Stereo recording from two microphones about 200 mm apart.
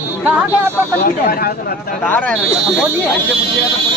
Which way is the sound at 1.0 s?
50° left (ahead or behind).